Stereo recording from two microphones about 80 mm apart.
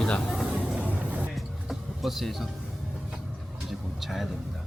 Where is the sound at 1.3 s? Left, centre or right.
Centre.